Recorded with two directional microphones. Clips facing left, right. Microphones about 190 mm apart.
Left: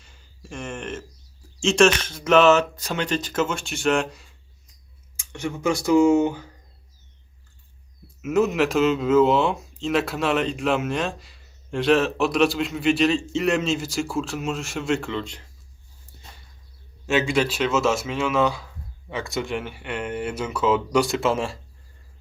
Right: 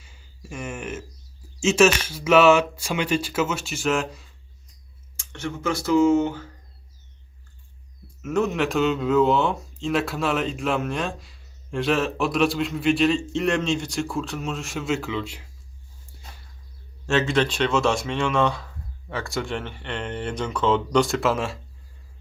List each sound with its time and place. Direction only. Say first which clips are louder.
0.0 s a sound: right 1 dB; 5° right (ahead or behind)
1.6 s speech: even; 5° right (ahead or behind)
5.1 s speech: left 2 dB; 10° left (ahead or behind)
8.2 s speech: left 3 dB; 5° left (ahead or behind)
17.1 s speech: even; 15° left (ahead or behind)